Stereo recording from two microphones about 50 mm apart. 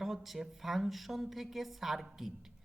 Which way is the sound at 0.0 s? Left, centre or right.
Centre.